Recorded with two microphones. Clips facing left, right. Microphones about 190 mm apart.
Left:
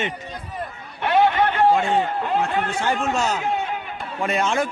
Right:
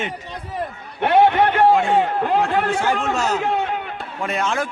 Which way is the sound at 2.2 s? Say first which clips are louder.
Right 4 dB; 80° right.